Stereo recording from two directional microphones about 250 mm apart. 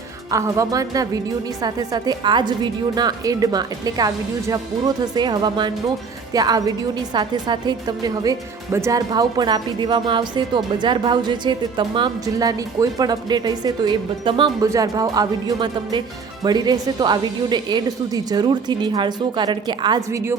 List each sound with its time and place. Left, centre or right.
0.3 s a woman's voice: centre